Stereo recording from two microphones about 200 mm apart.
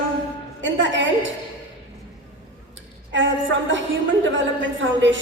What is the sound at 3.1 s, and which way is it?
A woman's voice, 65° right (ahead or behind).